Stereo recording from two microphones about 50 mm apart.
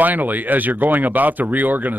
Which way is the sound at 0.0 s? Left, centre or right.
Right.